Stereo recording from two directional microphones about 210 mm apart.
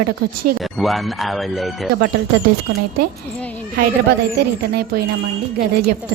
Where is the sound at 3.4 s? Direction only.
5° left (ahead or behind).